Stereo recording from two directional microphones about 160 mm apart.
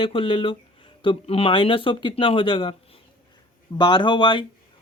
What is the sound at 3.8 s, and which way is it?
Speech, 30° left (ahead or behind).